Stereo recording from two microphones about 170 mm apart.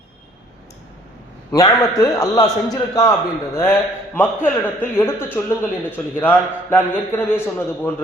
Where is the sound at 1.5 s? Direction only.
20° left (ahead or behind).